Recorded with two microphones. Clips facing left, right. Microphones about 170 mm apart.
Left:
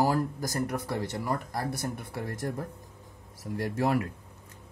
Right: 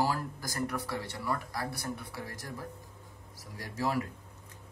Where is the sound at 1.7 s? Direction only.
20° left (ahead or behind).